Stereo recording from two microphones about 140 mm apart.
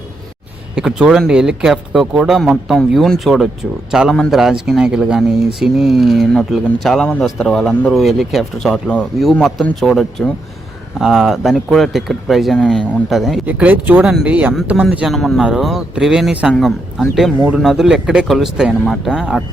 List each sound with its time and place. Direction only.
0.8 s speech: 5° right (ahead or behind)
13.4 s speech: 10° right (ahead or behind)